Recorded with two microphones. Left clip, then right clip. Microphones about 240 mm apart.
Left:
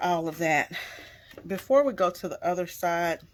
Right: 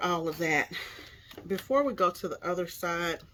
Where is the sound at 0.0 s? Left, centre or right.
Left.